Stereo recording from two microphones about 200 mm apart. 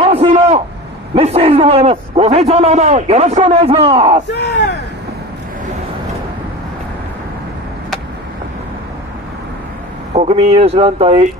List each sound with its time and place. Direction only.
0.0 s a sound: 30° right (ahead or behind)
1.1 s a man's voice: 30° right (ahead or behind)
4.3 s speech: 60° left (ahead or behind)
10.1 s speech: 30° right (ahead or behind)